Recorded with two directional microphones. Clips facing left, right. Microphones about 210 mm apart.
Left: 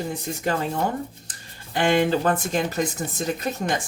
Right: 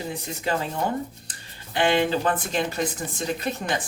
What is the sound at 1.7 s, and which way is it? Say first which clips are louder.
Speech: left 2 dB; 45° left (ahead or behind).